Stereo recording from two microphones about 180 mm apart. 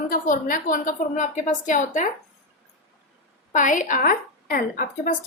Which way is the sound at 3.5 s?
45° left (ahead or behind).